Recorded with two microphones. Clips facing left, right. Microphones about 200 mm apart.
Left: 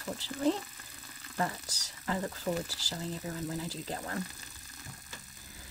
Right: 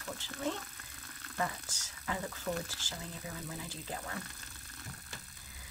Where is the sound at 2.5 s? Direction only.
50° left (ahead or behind).